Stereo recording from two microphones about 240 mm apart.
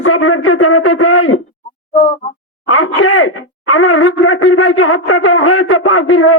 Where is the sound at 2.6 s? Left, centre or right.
Left.